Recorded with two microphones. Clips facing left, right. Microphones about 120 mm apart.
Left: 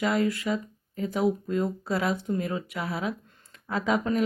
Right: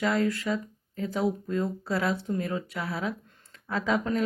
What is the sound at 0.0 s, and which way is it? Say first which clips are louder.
Speech: left 1 dB; 15° left (ahead or behind).